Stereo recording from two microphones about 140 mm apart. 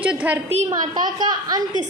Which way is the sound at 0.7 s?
30° right (ahead or behind).